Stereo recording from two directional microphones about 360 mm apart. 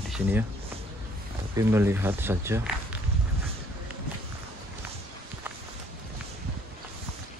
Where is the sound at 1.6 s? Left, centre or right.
Centre.